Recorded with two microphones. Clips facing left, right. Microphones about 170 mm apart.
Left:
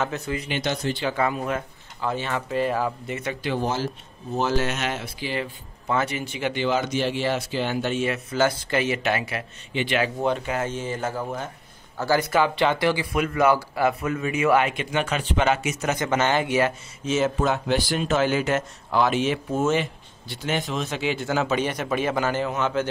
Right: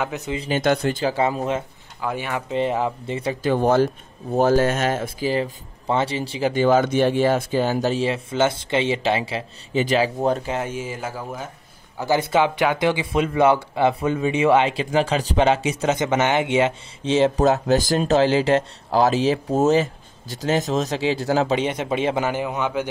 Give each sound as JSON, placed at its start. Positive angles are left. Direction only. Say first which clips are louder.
{"t": 0.0, "sound": "speech", "louder": "right 1 dB", "side_deg": -15}
{"t": 0.5, "sound": "speech", "louder": "right 8 dB", "side_deg": -50}
{"t": 1.0, "sound": "speech", "louder": "right 2 dB", "side_deg": -30}
{"t": 2.0, "sound": "speech", "louder": "right 1 dB", "side_deg": -10}
{"t": 3.4, "sound": "speech", "louder": "right 9 dB", "side_deg": -55}
{"t": 10.7, "sound": "speech", "louder": "left 1 dB", "side_deg": -10}
{"t": 12.0, "sound": "speech", "louder": "right 2 dB", "side_deg": -20}